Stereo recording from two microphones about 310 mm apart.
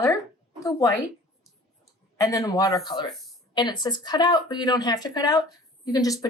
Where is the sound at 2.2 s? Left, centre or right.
Centre.